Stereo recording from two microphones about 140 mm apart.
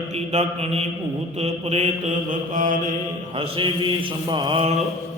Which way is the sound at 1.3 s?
50° right (ahead or behind).